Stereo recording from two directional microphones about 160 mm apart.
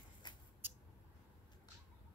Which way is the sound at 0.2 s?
25° left (ahead or behind).